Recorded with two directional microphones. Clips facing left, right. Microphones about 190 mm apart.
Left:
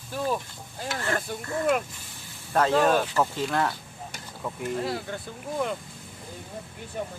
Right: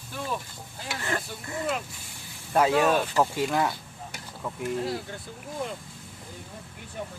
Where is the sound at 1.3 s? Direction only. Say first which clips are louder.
Left 5 dB; 55° left (ahead or behind).